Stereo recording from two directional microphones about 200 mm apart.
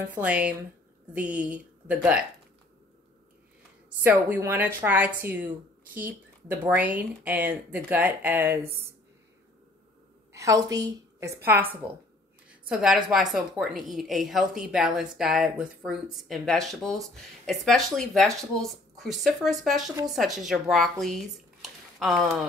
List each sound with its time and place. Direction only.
0.2 s speech: 5° right (ahead or behind)
4.0 s speech: 10° right (ahead or behind)
10.3 s a woman's voice: 15° right (ahead or behind); by 22.3 s centre (ahead or behind)